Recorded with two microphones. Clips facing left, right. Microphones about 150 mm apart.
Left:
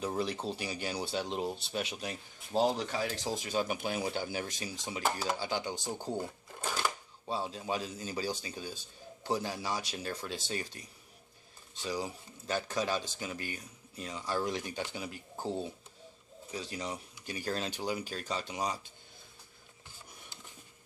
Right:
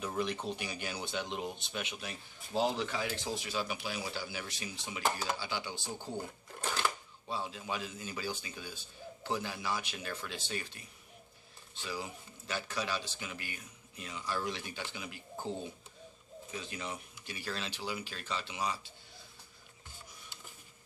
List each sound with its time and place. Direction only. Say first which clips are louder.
0.0 s speech: left 2 dB; 35° left (ahead or behind)
6.6 s a sound: even; 10° left (ahead or behind)
7.2 s speech: left 3 dB; 40° left (ahead or behind)